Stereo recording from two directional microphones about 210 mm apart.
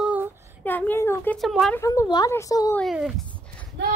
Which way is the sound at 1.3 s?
Centre (ahead or behind).